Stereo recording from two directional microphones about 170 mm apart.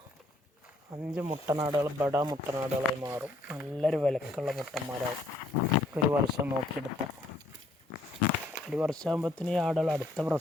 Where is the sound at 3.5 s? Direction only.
Centre (ahead or behind).